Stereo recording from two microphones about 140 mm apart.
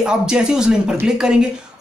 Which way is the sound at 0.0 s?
5° right (ahead or behind).